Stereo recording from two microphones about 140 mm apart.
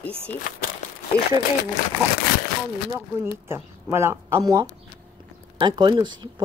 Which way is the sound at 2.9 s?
20° right (ahead or behind).